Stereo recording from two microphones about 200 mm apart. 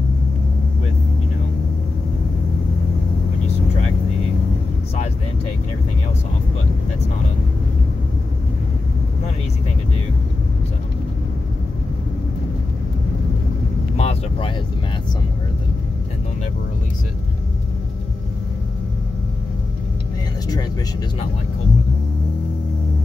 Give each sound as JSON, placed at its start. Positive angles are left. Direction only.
{"t": 13.9, "sound": "vehicle", "side_deg": 30}